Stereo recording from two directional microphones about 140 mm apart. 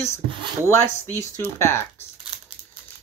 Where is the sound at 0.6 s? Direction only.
20° left (ahead or behind).